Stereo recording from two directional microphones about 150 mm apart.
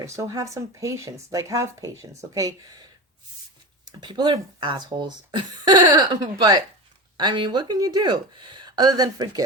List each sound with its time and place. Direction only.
0.0 s speech: 20° right (ahead or behind)
4.0 s speech: 30° right (ahead or behind)